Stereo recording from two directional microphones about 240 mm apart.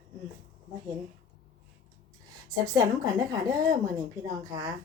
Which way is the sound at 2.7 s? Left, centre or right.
Centre.